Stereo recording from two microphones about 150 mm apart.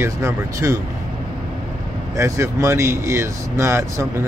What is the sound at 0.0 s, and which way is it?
Speech, 20° right (ahead or behind).